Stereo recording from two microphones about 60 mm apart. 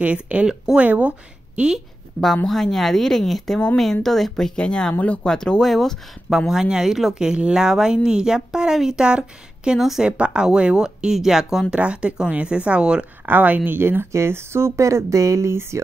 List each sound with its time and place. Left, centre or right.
0.0 s speech: right
2.4 s speech: centre
4.6 s speech: centre
5.3 s speech: centre
6.5 s speech: centre
10.0 s speech: centre
11.7 s speech: centre
13.2 s speech: right